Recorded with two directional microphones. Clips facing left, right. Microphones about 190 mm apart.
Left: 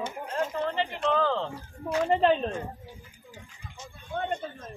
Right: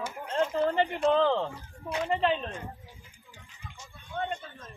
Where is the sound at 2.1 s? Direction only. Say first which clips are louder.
Left 4 dB; 45° left (ahead or behind).